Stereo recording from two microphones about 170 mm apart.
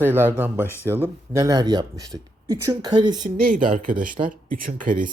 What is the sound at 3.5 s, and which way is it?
Speech, 50° right (ahead or behind).